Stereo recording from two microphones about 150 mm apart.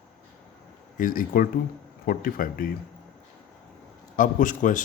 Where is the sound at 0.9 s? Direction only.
70° left (ahead or behind).